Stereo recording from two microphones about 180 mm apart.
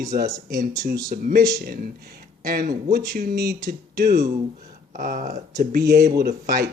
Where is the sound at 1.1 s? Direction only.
55° right (ahead or behind).